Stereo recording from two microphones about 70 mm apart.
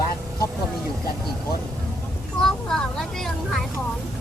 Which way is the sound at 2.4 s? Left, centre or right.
Centre.